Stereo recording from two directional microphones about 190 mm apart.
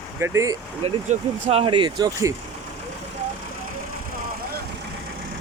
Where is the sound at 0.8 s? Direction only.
30° right (ahead or behind).